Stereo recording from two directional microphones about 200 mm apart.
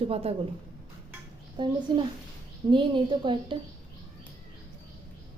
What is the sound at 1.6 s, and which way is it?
A woman's voice, 25° right (ahead or behind).